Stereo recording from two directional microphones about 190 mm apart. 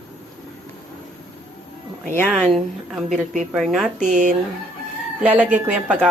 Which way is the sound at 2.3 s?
Centre (ahead or behind).